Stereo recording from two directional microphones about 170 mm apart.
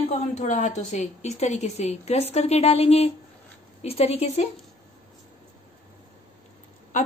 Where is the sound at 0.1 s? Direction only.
45° left (ahead or behind).